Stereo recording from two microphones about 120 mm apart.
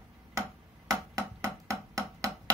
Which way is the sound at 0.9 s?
25° right (ahead or behind).